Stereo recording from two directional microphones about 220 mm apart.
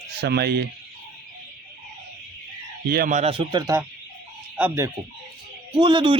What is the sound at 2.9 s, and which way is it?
A man's voice, 35° right (ahead or behind).